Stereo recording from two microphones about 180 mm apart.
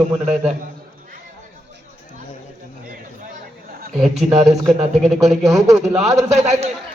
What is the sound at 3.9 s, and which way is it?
Speech, centre (ahead or behind).